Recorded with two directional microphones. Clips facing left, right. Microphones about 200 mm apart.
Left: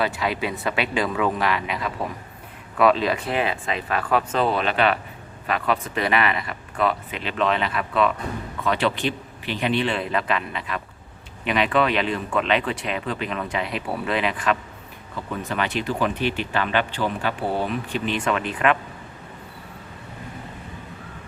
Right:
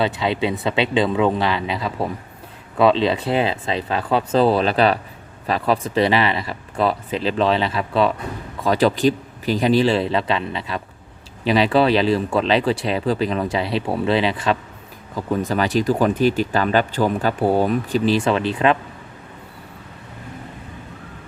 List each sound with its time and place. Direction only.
0.0 s speech: 25° right (ahead or behind)